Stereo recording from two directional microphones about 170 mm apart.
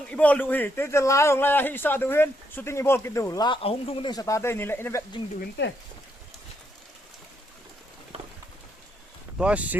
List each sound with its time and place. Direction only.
0.1 s a man's voice: 10° left (ahead or behind)
5.4 s speech: 90° left
9.4 s speech: 5° right (ahead or behind)